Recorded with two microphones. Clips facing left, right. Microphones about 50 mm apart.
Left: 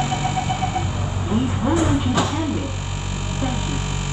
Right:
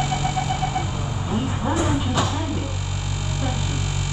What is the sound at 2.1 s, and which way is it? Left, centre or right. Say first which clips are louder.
Music: left 2 dB; left.